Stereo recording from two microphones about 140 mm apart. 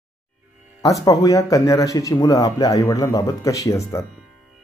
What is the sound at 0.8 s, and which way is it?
Speech, 25° left (ahead or behind).